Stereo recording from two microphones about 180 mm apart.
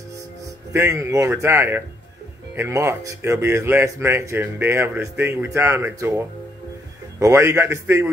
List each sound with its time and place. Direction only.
0.7 s speech: 15° right (ahead or behind)